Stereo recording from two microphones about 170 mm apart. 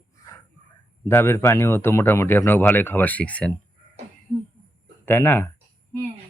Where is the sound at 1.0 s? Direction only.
15° left (ahead or behind).